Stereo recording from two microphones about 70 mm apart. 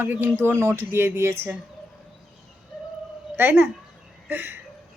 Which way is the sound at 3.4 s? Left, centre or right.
Right.